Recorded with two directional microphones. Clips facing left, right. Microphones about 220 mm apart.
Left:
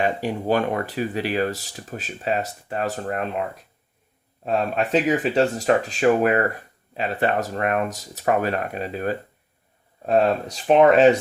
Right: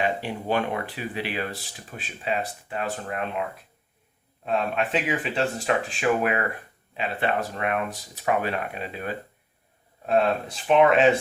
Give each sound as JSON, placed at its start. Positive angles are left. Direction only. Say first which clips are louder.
{"t": 0.0, "sound": "speech", "louder": "left 4 dB", "side_deg": 45}